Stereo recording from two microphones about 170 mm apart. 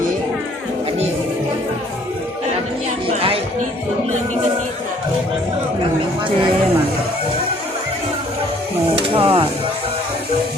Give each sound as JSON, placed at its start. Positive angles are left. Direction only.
{"t": 3.1, "sound": "music", "side_deg": -35}
{"t": 9.1, "sound": "music", "side_deg": -35}